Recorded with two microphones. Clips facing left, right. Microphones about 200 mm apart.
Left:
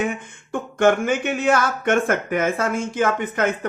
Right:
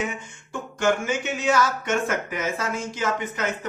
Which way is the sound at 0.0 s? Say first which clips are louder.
Left 5 dB; 55° left (ahead or behind).